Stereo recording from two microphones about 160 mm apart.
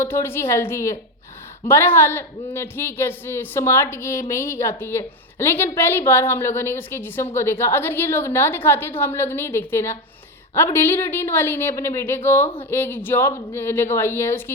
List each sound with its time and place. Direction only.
0.0 s speech: 15° left (ahead or behind)